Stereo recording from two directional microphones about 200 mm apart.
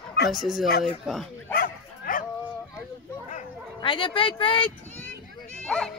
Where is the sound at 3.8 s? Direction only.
25° left (ahead or behind).